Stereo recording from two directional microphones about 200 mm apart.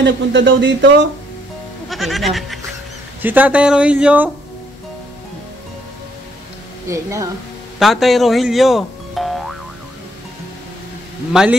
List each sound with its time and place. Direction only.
0.0 s speech: 65° right (ahead or behind)
1.9 s speech: centre (ahead or behind)
6.9 s speech: 15° right (ahead or behind)
7.8 s speech: centre (ahead or behind)
11.3 s speech: 5° right (ahead or behind)